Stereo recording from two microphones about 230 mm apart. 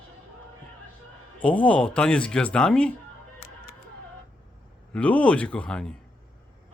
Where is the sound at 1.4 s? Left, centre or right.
Centre.